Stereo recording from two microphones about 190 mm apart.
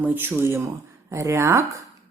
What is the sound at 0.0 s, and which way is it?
A woman's voice, 10° right (ahead or behind).